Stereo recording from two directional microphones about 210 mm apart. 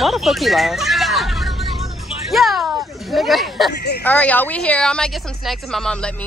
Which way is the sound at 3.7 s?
50° left (ahead or behind).